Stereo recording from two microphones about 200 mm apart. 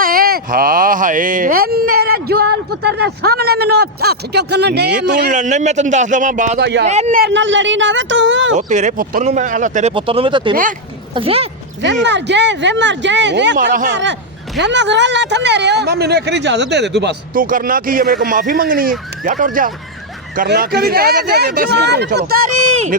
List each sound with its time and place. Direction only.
0.0 s speech: 45° right (ahead or behind)
5.3 s speech: 35° right (ahead or behind)
6.6 s speech: 60° right (ahead or behind)
6.8 s speech: 35° right (ahead or behind)
7.2 s a woman's voice: 60° right (ahead or behind)
8.5 s speech: 35° right (ahead or behind)
9.9 s speech: 25° right (ahead or behind)
10.5 s speech: 40° right (ahead or behind)
11.1 s speech: 30° right (ahead or behind)
12.0 s speech: 60° right (ahead or behind)